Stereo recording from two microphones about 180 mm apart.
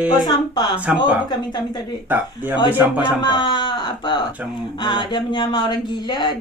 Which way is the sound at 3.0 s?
25° left (ahead or behind).